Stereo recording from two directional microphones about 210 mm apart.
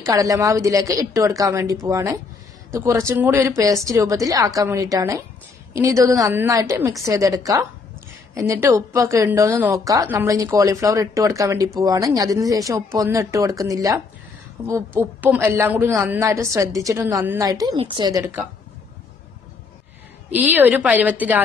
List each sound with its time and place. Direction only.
0.0 s a woman's voice: 15° right (ahead or behind)
20.2 s a woman's voice: 10° right (ahead or behind)